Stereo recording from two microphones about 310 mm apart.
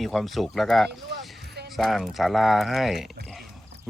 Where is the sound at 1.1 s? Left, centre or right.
Right.